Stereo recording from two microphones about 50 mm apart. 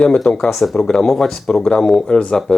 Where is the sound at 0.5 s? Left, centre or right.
Centre.